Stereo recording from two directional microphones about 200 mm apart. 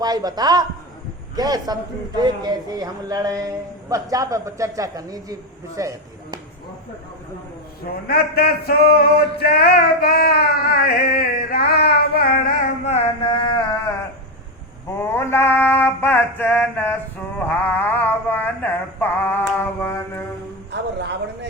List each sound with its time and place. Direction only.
0.0 s a man's voice: 20° right (ahead or behind)
8.0 s a sound: 50° left (ahead or behind)
12.8 s music: 30° left (ahead or behind)
14.8 s mantra: 10° left (ahead or behind)